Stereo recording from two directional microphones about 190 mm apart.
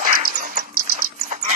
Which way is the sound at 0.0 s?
50° right (ahead or behind).